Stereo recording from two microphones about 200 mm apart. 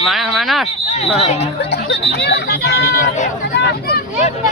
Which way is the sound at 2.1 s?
55° left (ahead or behind).